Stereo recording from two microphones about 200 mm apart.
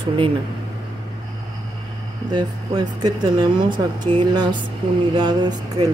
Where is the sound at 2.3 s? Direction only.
20° right (ahead or behind).